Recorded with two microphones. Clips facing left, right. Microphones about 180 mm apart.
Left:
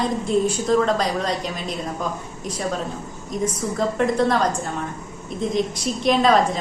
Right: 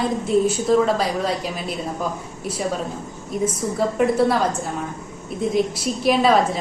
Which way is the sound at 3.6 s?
10° right (ahead or behind).